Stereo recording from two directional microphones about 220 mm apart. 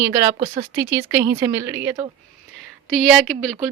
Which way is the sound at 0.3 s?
25° right (ahead or behind).